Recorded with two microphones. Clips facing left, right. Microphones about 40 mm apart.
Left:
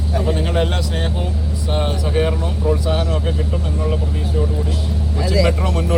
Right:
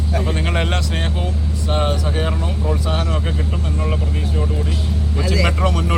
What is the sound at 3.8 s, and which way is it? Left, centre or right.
Speech, centre.